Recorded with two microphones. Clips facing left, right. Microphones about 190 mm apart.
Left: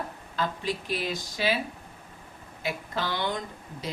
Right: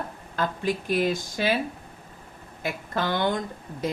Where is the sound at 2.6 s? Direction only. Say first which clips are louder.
Right 3 dB; 50° right (ahead or behind).